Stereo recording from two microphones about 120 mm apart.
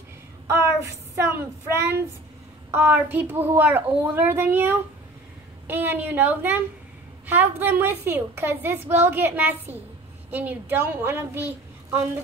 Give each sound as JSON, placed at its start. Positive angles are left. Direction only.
{"t": 0.5, "sound": "a woman's voice", "side_deg": -20}